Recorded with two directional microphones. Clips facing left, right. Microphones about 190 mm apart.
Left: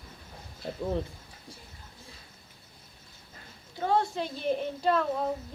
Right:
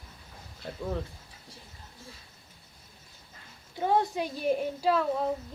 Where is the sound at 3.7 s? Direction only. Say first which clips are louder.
Right 1 dB; 15° right (ahead or behind).